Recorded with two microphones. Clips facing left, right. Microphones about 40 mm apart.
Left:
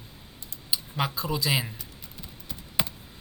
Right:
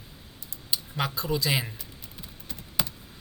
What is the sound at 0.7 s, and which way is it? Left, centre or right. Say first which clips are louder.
Speech: left 1 dB; centre.